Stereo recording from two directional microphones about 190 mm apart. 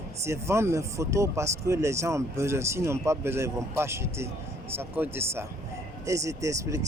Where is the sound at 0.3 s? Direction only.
15° right (ahead or behind).